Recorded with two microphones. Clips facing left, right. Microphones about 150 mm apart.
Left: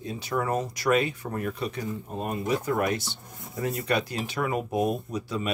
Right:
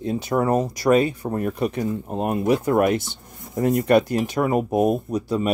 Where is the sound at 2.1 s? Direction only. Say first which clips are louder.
Right 7 dB; 65° right (ahead or behind); by 5.5 s 40° right (ahead or behind).